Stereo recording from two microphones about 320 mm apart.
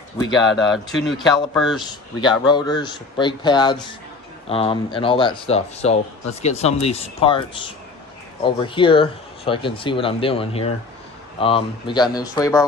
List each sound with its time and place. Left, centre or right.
0.5 s speech: centre
2.2 s speech: centre
8.4 s speech: centre